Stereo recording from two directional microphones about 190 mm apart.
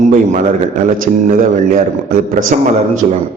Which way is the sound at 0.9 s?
45° right (ahead or behind).